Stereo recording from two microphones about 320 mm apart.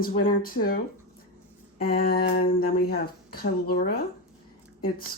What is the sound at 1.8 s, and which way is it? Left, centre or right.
Speech, left.